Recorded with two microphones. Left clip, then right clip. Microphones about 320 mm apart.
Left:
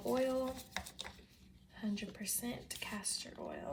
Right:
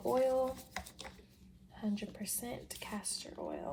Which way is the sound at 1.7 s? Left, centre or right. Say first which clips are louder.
Right 2 dB; centre.